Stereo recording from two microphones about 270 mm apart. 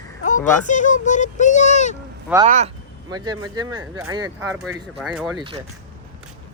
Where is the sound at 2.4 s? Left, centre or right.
Right.